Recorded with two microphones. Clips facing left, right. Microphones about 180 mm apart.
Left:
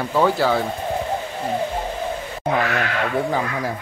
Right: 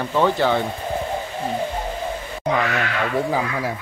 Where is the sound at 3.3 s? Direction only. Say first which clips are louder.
Even; 5° right (ahead or behind).